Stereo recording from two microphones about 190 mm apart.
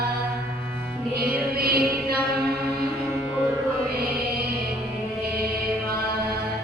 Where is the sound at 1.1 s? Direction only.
55° right (ahead or behind).